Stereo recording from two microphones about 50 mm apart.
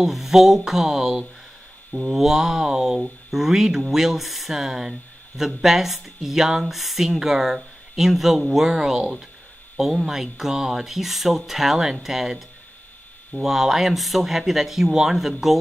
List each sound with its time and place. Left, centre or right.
0.0 s speech: centre